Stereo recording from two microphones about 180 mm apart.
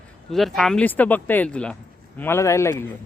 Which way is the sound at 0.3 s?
Centre (ahead or behind).